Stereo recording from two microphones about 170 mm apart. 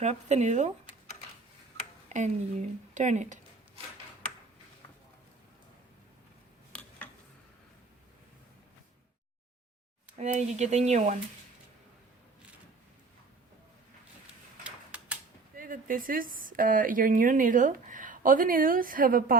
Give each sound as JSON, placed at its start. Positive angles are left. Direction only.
{"t": 0.0, "sound": "speech", "side_deg": -40}
{"t": 2.0, "sound": "speech", "side_deg": -45}
{"t": 10.2, "sound": "speech", "side_deg": -40}
{"t": 14.6, "sound": "a sound", "side_deg": -10}
{"t": 15.5, "sound": "a woman's voice", "side_deg": -55}